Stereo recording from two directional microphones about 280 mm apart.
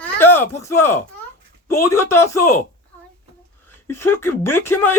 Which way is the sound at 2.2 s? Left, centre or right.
Left.